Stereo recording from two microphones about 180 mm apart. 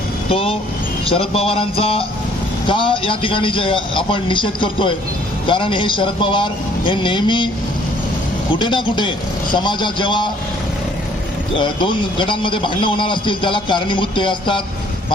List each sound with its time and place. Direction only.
0.3 s a man's voice: 30° left (ahead or behind)
8.5 s a man's voice: 25° left (ahead or behind)
11.5 s a man's voice: 25° left (ahead or behind)